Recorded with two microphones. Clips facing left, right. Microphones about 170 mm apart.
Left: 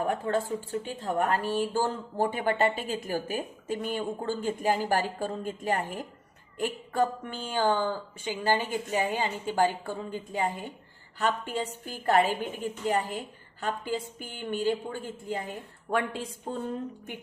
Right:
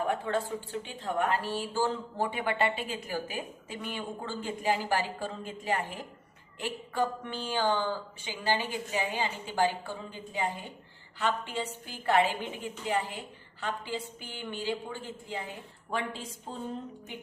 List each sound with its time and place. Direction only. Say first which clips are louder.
0.0 s speech: left 2 dB; 40° left (ahead or behind)